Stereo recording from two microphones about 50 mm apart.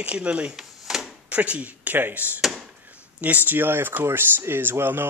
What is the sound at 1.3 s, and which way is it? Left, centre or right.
Speech, right.